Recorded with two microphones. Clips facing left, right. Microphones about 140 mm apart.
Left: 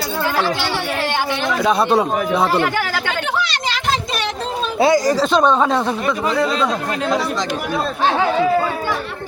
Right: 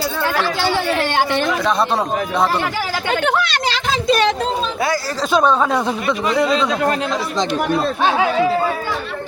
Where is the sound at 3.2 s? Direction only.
55° right (ahead or behind).